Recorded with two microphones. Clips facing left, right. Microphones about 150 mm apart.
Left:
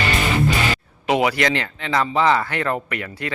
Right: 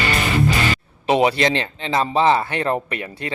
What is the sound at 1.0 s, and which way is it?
Speech, 25° right (ahead or behind).